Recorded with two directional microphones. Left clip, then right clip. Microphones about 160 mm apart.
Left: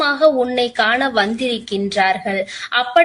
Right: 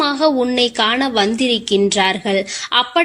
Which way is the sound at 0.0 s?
40° right (ahead or behind).